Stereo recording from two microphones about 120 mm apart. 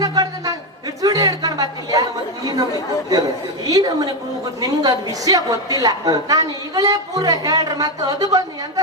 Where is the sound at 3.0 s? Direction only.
30° right (ahead or behind).